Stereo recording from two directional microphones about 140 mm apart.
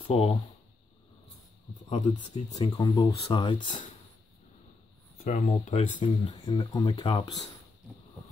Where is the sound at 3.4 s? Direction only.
35° left (ahead or behind).